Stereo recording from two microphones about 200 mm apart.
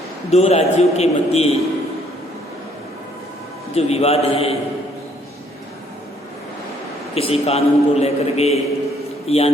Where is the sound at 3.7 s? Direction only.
30° left (ahead or behind).